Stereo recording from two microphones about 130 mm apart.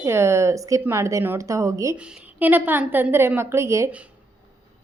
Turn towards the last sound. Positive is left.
turn(degrees=-20)  # may be behind; listen again after turning